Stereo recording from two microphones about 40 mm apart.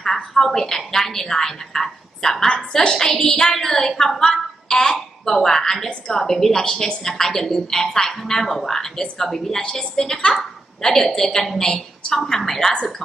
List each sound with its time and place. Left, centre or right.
0.0 s a woman's voice: centre